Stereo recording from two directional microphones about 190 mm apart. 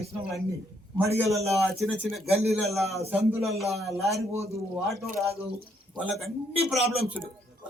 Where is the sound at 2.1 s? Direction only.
Centre (ahead or behind).